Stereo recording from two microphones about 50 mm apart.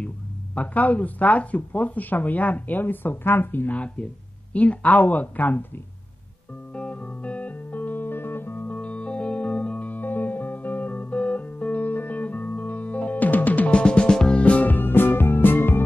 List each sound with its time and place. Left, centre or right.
0.6 s speech: left
6.7 s music: left
8.6 s music: left
13.7 s music: centre
14.4 s music: left